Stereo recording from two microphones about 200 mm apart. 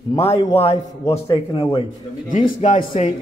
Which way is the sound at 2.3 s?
40° left (ahead or behind).